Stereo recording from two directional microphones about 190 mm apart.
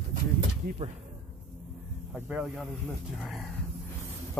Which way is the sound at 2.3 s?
5° right (ahead or behind).